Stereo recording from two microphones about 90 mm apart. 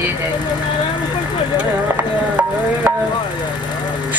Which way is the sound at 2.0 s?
20° right (ahead or behind).